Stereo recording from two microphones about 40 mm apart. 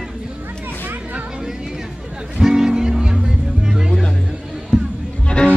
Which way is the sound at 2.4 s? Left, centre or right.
Centre.